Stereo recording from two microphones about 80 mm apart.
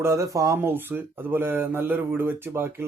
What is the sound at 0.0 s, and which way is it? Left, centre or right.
Speech, right.